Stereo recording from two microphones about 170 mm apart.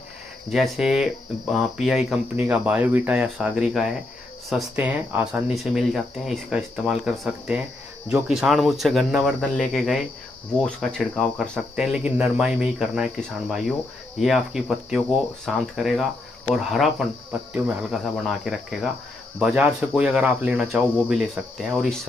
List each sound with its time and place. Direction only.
0.5 s speech: centre (ahead or behind)